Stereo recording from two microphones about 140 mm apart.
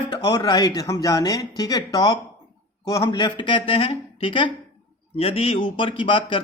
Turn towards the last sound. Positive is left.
turn(degrees=40)  # may be behind; listen again after turning